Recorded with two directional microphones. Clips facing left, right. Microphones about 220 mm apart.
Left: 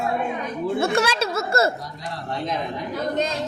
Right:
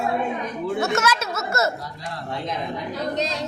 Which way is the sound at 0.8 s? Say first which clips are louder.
Left 2 dB; 30° left (ahead or behind).